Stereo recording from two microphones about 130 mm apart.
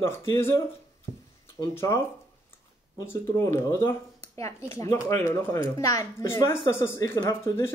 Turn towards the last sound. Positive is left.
turn(degrees=20)  # may be behind; listen again after turning